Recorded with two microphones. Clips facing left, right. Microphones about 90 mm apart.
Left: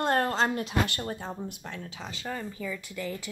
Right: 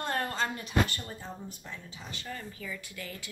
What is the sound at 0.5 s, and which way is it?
Speech, 70° left (ahead or behind).